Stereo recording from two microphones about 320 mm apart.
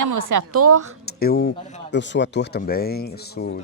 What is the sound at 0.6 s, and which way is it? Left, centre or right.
Speech, right.